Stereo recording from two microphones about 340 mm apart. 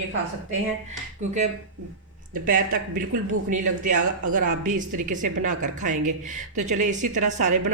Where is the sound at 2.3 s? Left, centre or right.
Right.